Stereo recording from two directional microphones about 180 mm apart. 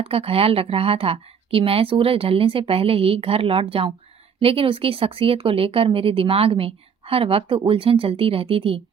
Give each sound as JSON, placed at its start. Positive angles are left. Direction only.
{"t": 0.0, "sound": "speech", "side_deg": -30}